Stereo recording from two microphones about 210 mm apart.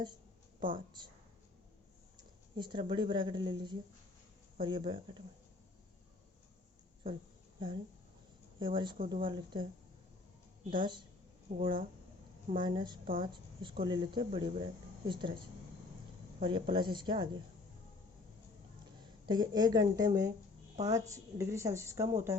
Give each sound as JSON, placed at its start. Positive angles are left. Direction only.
{"t": 0.6, "sound": "speech", "side_deg": -25}
{"t": 2.1, "sound": "speech", "side_deg": -20}
{"t": 8.5, "sound": "speech", "side_deg": -25}
{"t": 10.6, "sound": "a woman's voice", "side_deg": -40}
{"t": 11.4, "sound": "speech", "side_deg": -30}
{"t": 16.4, "sound": "speech", "side_deg": -25}
{"t": 19.2, "sound": "a woman's voice", "side_deg": -20}